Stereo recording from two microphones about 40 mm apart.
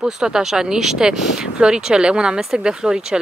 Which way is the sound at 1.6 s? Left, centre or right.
Right.